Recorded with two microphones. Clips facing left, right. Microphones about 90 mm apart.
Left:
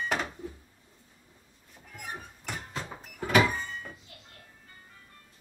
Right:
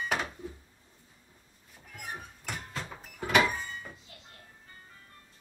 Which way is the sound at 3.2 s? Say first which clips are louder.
Left 2 dB; 5° right (ahead or behind).